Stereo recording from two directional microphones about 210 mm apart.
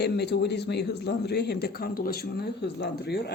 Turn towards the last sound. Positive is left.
turn(degrees=50)  # may be behind; listen again after turning